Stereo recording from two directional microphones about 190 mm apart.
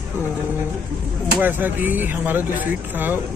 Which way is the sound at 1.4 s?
10° right (ahead or behind).